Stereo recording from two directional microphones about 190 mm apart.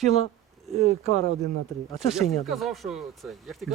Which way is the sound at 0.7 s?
35° right (ahead or behind).